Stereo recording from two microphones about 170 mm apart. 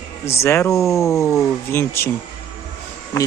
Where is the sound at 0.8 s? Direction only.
Centre (ahead or behind).